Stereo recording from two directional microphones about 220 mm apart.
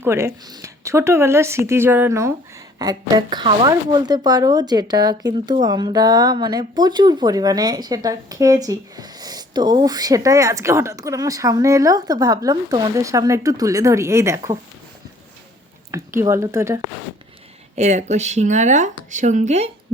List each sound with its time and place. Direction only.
0.0 s a woman's voice: 10° right (ahead or behind)
15.9 s a woman's voice: 15° right (ahead or behind)
17.7 s speech: 30° right (ahead or behind)